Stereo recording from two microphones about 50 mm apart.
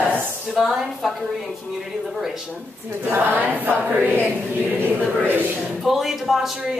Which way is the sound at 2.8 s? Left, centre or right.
Right.